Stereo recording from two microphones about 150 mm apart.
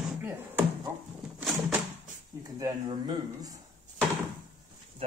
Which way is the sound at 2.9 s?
25° right (ahead or behind).